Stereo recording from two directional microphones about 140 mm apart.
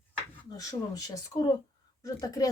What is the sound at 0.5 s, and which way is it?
Speech, 25° left (ahead or behind).